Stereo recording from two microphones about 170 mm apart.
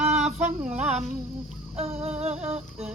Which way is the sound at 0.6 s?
5° right (ahead or behind).